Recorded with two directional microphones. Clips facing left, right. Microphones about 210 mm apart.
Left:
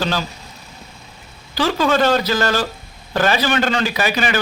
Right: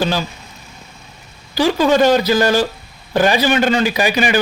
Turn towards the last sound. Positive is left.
turn(degrees=-15)  # may be behind; listen again after turning